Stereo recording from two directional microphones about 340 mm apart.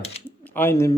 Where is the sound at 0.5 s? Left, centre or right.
Centre.